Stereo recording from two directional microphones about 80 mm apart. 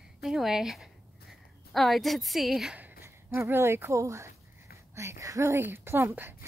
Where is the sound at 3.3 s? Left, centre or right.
Right.